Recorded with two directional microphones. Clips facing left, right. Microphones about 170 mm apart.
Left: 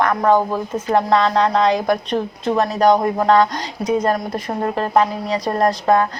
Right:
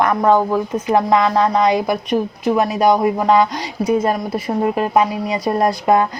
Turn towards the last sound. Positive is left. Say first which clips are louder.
# right 1 dB
turn(degrees=-10)  # may be behind; listen again after turning